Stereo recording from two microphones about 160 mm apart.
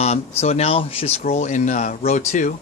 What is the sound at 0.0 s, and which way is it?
Speech, 40° left (ahead or behind).